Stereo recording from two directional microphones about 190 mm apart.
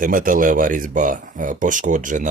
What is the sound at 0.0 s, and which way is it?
Speech, 45° right (ahead or behind).